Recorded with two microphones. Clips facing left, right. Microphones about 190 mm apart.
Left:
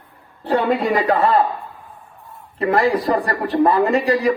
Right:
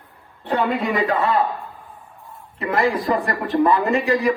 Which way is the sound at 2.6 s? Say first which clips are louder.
Left 3 dB; 35° left (ahead or behind).